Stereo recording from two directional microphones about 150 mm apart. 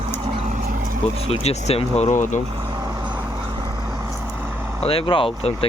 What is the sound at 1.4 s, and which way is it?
Speech, 45° left (ahead or behind).